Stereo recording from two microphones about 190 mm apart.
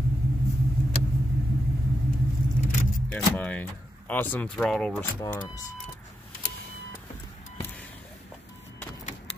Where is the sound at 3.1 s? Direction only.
5° left (ahead or behind).